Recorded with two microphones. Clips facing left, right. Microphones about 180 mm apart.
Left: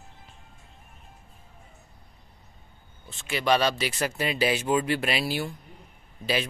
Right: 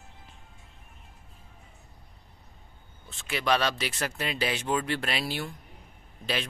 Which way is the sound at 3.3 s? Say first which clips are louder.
Left 3 dB; centre (ahead or behind).